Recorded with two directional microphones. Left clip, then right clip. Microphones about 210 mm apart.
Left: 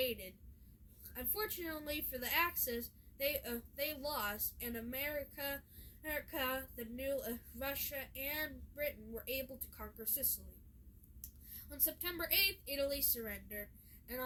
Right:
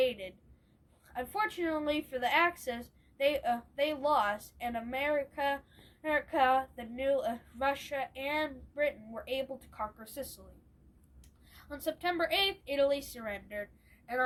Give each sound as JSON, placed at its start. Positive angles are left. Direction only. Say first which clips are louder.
{"t": 0.0, "sound": "a sound", "louder": "right 8 dB", "side_deg": 20}
{"t": 1.1, "sound": "a woman's voice", "louder": "right 10 dB", "side_deg": 20}
{"t": 11.5, "sound": "a woman's voice", "louder": "right 10 dB", "side_deg": 15}